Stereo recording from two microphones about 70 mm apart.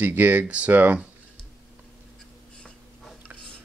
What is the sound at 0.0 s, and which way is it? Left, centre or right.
Speech, right.